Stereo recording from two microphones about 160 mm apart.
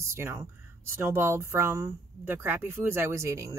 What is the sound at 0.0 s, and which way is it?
Speech, 15° right (ahead or behind).